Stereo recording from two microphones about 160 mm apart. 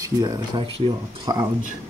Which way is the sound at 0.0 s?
25° right (ahead or behind).